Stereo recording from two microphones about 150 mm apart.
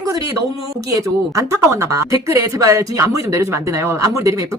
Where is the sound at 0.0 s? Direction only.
25° right (ahead or behind).